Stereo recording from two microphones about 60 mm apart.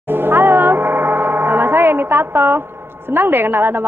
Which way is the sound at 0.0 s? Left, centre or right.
Right.